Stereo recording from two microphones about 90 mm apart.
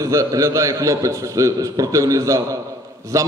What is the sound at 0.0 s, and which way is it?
A man's voice, 40° right (ahead or behind).